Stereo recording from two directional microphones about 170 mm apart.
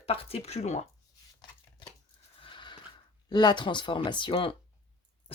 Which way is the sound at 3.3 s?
25° left (ahead or behind).